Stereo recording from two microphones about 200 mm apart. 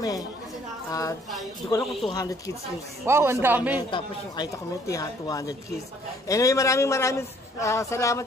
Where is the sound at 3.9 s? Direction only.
20° left (ahead or behind).